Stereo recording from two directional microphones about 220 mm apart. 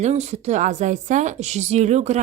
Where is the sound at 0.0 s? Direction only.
30° right (ahead or behind).